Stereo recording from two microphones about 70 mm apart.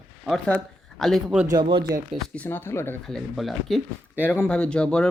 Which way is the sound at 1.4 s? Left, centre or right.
Right.